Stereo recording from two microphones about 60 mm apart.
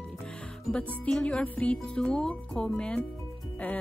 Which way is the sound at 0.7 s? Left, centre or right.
Left.